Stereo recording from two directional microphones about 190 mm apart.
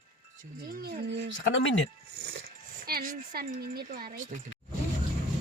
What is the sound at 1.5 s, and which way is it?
Speech, 80° left.